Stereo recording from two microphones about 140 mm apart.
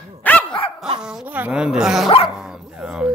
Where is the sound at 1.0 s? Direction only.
5° right (ahead or behind).